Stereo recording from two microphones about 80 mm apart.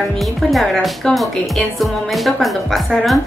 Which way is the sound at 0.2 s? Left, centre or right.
Centre.